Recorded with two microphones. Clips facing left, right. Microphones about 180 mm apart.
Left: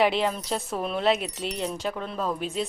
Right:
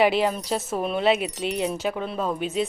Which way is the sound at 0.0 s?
5° right (ahead or behind).